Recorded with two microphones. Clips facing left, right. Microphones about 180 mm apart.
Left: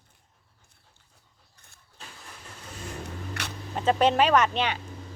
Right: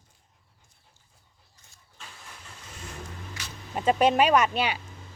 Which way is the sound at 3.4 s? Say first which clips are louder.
Left 6 dB; 65° left (ahead or behind).